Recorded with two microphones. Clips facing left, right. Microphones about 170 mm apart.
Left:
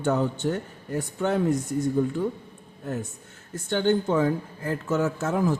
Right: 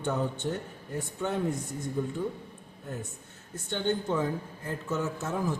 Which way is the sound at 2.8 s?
80° left.